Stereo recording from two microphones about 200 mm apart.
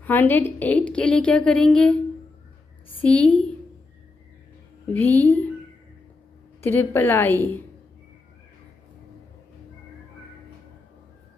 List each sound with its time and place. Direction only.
0.0 s a woman's voice: 10° left (ahead or behind)
3.0 s a woman's voice: 5° left (ahead or behind)
4.9 s a woman's voice: 10° left (ahead or behind)
6.6 s a woman's voice: 10° left (ahead or behind)